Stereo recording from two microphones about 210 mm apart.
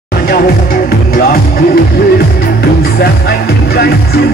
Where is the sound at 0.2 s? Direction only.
45° left (ahead or behind).